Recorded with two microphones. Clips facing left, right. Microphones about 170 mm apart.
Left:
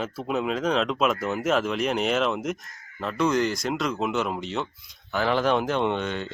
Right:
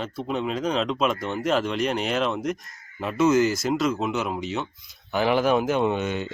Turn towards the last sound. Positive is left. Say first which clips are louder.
# right 2 dB
turn(degrees=-10)  # may be behind; listen again after turning